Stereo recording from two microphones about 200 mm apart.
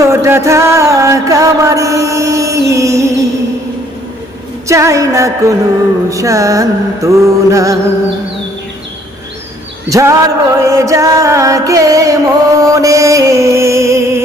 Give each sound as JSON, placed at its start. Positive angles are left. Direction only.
{"t": 0.0, "sound": "music", "side_deg": -15}
{"t": 4.7, "sound": "music", "side_deg": -15}
{"t": 9.9, "sound": "music", "side_deg": -15}